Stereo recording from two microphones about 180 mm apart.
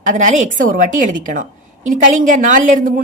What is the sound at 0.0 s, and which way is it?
A woman's voice, 45° right (ahead or behind).